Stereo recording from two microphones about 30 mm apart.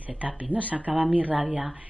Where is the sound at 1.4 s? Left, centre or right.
Right.